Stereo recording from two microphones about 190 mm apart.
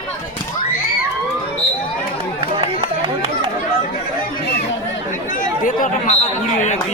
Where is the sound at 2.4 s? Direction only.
30° right (ahead or behind).